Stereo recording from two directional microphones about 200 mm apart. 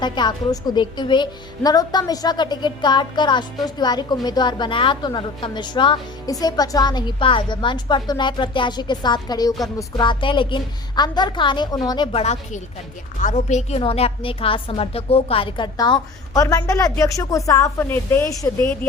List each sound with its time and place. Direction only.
0.0 s a woman's voice: 20° left (ahead or behind)
12.2 s a woman's voice: 35° left (ahead or behind); by 18.9 s 10° left (ahead or behind)